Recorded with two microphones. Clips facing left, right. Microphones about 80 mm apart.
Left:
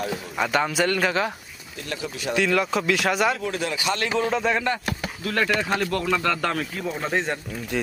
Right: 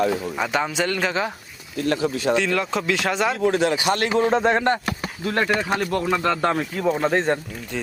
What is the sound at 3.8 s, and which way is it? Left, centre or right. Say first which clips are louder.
Speech: right 4 dB; right.